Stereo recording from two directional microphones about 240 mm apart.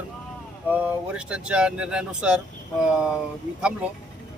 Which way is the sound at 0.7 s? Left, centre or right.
Centre.